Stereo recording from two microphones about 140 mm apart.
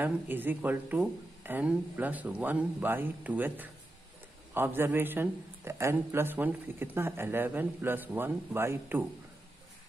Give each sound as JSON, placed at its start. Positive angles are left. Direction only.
{"t": 0.0, "sound": "a man's voice", "side_deg": -15}